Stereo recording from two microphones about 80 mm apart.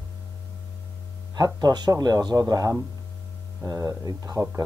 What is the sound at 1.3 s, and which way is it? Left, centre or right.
Speech, right.